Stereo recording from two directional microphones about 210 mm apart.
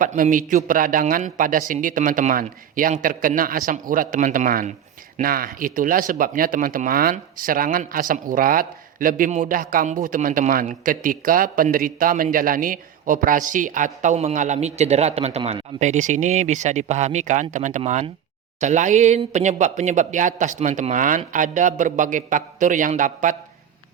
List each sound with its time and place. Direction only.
0.0 s speech: 40° right (ahead or behind)